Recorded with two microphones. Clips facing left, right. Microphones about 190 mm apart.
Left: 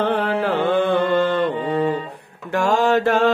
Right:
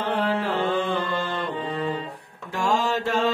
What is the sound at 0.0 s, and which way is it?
Music, 60° left (ahead or behind).